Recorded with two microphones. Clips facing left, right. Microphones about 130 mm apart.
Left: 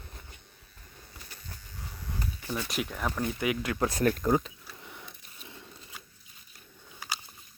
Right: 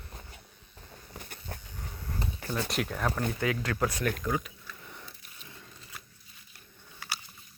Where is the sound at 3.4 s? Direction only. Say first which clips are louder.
Left 1 dB; 15° left (ahead or behind).